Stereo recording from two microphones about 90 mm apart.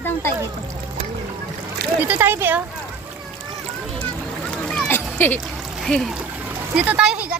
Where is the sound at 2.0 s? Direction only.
20° right (ahead or behind).